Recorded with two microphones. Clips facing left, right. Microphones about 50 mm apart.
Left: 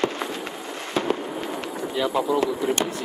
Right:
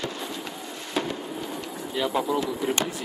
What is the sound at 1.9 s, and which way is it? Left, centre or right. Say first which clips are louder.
Speech: left 2 dB; centre.